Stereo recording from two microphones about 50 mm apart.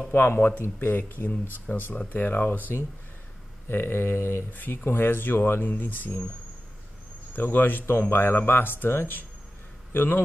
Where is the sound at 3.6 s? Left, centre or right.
Left.